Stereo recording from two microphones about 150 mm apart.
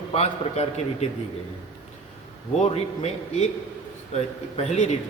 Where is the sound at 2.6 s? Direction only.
45° left (ahead or behind).